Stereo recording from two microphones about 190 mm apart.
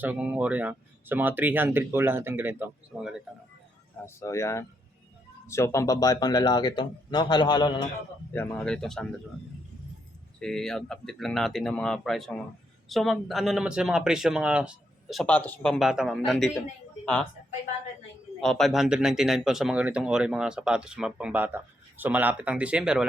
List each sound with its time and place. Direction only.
0.0 s speech: 5° right (ahead or behind)
4.0 s speech: 15° left (ahead or behind)
8.3 s speech: 10° left (ahead or behind)
10.4 s speech: 5° left (ahead or behind)
18.3 s speech: 5° left (ahead or behind)